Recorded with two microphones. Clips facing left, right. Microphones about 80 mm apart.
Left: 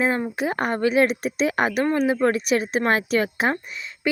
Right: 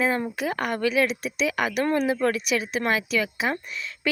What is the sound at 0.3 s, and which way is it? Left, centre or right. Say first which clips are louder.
A woman's voice: left 3 dB; left.